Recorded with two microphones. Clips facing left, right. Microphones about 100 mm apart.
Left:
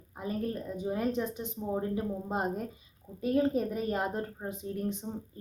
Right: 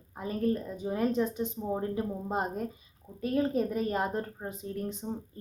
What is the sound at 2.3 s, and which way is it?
A woman's voice, 15° left (ahead or behind).